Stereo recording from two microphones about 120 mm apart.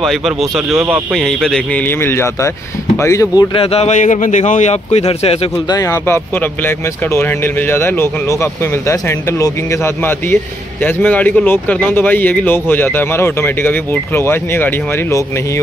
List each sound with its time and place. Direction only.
0.0 s speech: centre (ahead or behind)
0.7 s speech: 20° right (ahead or behind)
1.1 s a man's voice: 5° left (ahead or behind); by 3.4 s 25° left (ahead or behind)
3.5 s speech: 55° left (ahead or behind)
5.7 s a man's voice: 25° left (ahead or behind)